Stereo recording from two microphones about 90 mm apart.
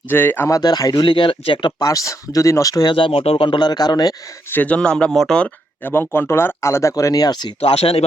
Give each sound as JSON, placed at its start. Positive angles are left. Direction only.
{"t": 0.1, "sound": "speech", "side_deg": 20}
{"t": 0.4, "sound": "speech", "side_deg": 45}
{"t": 1.8, "sound": "speech", "side_deg": 40}
{"t": 2.9, "sound": "speech", "side_deg": 80}
{"t": 3.6, "sound": "speech", "side_deg": 50}
{"t": 4.4, "sound": "speech", "side_deg": 20}
{"t": 5.8, "sound": "speech", "side_deg": 25}
{"t": 7.6, "sound": "speech", "side_deg": 90}